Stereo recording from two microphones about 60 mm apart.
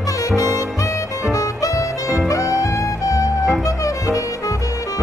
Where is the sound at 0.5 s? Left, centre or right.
Left.